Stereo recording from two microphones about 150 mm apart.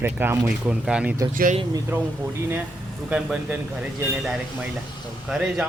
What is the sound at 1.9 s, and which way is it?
Speech, 10° right (ahead or behind).